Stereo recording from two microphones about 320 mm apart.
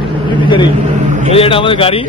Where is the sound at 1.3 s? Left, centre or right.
Centre.